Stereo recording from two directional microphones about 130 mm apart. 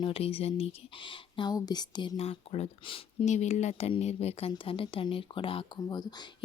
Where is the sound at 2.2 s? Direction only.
50° left (ahead or behind).